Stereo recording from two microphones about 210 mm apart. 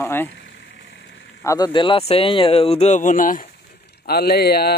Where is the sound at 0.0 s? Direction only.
10° left (ahead or behind).